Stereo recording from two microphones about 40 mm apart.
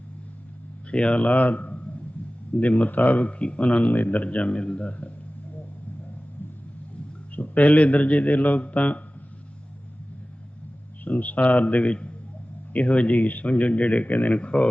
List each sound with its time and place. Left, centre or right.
0.9 s a man's voice: left
3.2 s a man's voice: left
3.6 s a man's voice: left
4.9 s a man's voice: left
7.3 s a man's voice: left
11.0 s a man's voice: left
14.1 s speech: left
14.3 s a man's voice: left